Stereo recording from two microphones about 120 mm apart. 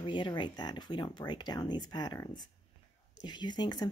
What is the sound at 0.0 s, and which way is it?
Speech, 40° left (ahead or behind).